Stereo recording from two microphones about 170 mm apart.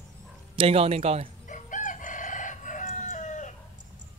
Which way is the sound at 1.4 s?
50° left (ahead or behind).